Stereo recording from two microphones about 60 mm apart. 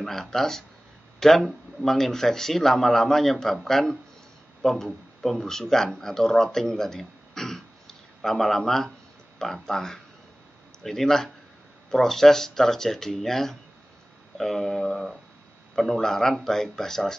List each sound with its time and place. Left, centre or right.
0.0 s speech: centre